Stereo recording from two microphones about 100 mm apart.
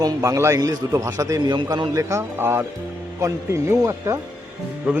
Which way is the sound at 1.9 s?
30° right (ahead or behind).